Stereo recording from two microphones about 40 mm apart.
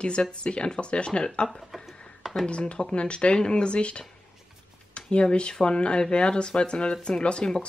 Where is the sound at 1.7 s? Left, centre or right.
Centre.